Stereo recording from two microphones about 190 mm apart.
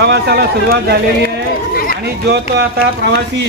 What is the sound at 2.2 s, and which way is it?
Speech, 60° right (ahead or behind).